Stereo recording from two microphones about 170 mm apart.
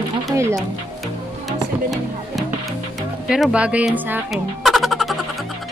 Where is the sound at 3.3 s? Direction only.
5° right (ahead or behind).